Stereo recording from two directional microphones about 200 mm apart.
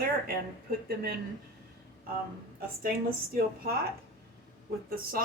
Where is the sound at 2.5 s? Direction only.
50° right (ahead or behind).